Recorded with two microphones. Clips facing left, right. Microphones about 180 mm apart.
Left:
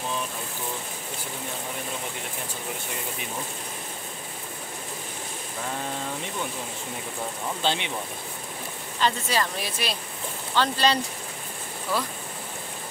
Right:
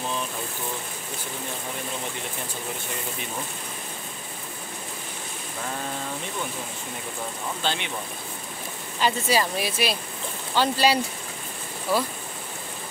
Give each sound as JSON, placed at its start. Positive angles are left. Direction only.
{"t": 7.6, "sound": "speech", "side_deg": 25}
{"t": 9.0, "sound": "speech", "side_deg": -10}